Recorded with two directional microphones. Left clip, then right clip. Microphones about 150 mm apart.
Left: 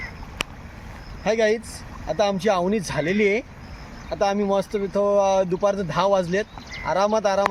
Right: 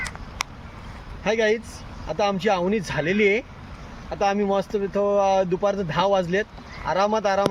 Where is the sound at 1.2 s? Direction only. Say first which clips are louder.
Left 1 dB; 25° right (ahead or behind).